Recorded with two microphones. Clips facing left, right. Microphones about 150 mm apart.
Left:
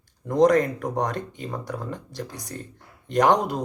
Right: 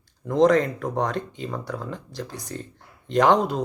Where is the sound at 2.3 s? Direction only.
40° left (ahead or behind).